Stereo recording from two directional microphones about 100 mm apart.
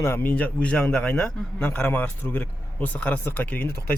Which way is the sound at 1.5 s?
20° left (ahead or behind).